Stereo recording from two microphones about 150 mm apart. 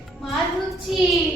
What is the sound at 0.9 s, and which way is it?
Child singing, 5° right (ahead or behind).